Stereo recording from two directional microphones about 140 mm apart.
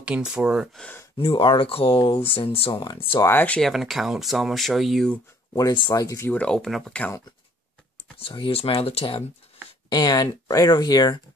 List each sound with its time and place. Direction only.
0.0 s speech: 10° right (ahead or behind)
0.7 s speech: 10° left (ahead or behind)
1.1 s speech: 35° left (ahead or behind)
3.2 s speech: 15° left (ahead or behind)
5.6 s speech: 30° left (ahead or behind); by 7.2 s 10° left (ahead or behind)
8.2 s speech: 40° left (ahead or behind)
9.8 s speech: 30° left (ahead or behind)